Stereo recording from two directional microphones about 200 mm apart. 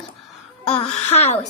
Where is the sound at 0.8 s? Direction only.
30° left (ahead or behind).